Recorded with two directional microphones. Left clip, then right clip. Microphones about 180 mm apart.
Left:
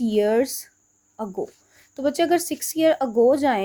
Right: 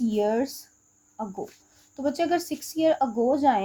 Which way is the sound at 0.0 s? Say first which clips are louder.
Left 5 dB; 40° left (ahead or behind).